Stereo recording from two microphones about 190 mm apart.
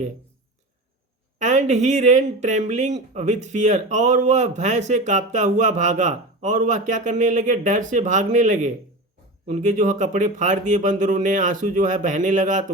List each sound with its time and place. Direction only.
1.4 s speech: 40° right (ahead or behind)